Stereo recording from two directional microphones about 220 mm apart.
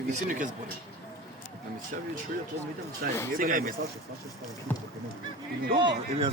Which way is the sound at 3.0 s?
40° right (ahead or behind).